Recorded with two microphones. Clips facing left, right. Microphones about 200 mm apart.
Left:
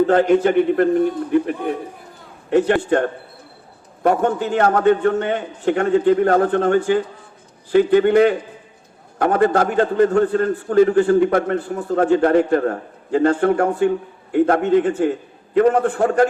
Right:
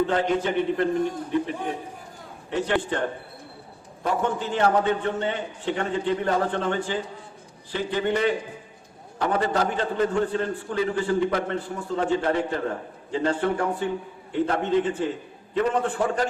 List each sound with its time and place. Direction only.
0.1 s a man's voice: 55° left (ahead or behind)
4.0 s a man's voice: 50° left (ahead or behind)